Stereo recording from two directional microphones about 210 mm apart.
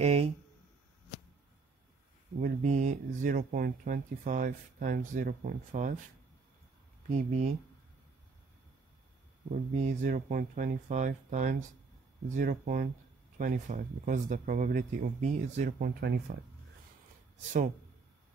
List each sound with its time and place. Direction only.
0.0 s speech: 30° right (ahead or behind)
2.4 s speech: 35° right (ahead or behind)
7.1 s speech: 35° right (ahead or behind)
9.5 s speech: 35° right (ahead or behind)